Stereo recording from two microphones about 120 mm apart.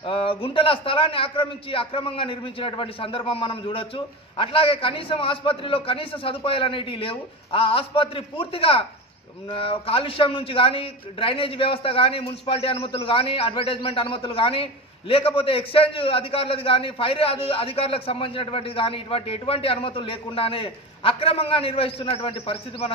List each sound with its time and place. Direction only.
0.0 s a man's voice: 50° left (ahead or behind)